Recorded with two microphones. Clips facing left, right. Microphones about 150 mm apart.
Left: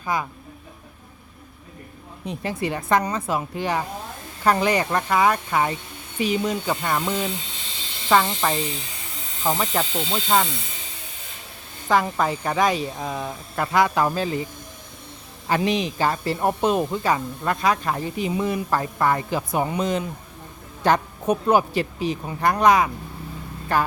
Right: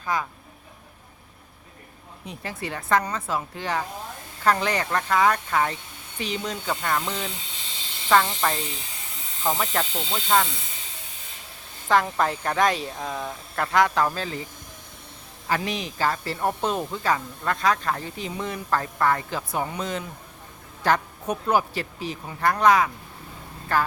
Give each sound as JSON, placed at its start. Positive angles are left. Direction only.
{"t": 0.0, "sound": "speech", "side_deg": 15}
{"t": 2.2, "sound": "speech", "side_deg": 20}
{"t": 11.9, "sound": "speech", "side_deg": 5}
{"t": 15.4, "sound": "speech", "side_deg": 20}